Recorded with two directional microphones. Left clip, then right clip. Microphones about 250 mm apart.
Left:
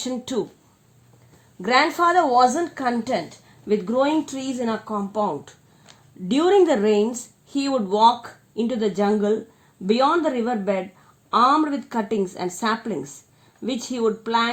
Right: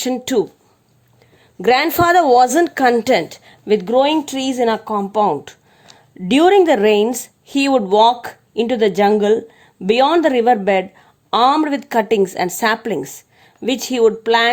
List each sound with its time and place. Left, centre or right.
0.0 s a woman's voice: right
1.6 s a woman's voice: right